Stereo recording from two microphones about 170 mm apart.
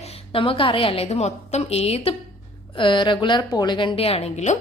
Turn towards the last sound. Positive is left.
turn(degrees=40)  # may be behind; listen again after turning